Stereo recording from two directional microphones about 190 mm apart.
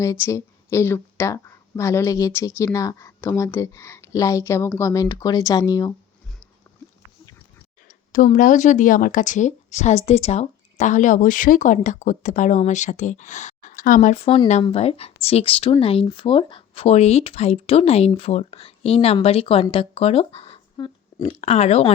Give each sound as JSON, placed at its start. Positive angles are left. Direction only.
{"t": 0.0, "sound": "speech", "side_deg": 15}
{"t": 8.1, "sound": "speech", "side_deg": 45}
{"t": 14.3, "sound": "speech", "side_deg": 35}